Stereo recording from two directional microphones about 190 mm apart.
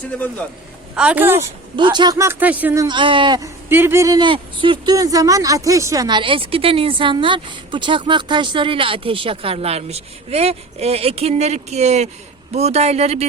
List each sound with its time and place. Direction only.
0.9 s speech: 5° right (ahead or behind)
1.7 s speech: 25° right (ahead or behind)
2.8 s speech: 25° right (ahead or behind)
3.7 s speech: 10° right (ahead or behind); by 13.2 s 35° right (ahead or behind)